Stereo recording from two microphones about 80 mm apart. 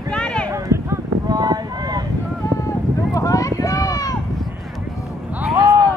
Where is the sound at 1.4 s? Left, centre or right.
Right.